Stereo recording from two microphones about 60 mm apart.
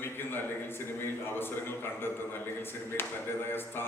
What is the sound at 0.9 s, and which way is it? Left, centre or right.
A man's voice, left.